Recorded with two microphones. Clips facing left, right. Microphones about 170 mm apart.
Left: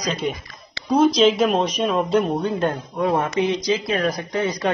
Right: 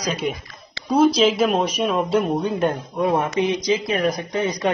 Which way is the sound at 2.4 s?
15° right (ahead or behind).